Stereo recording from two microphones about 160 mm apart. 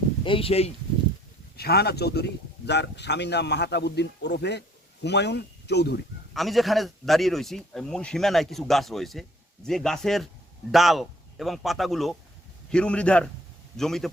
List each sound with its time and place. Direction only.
0.3 s speech: 35° left (ahead or behind)
1.5 s a man's voice: 80° left
6.3 s a man's voice: centre (ahead or behind)